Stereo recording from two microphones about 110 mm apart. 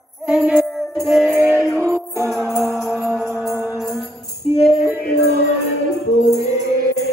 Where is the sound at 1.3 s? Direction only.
20° right (ahead or behind).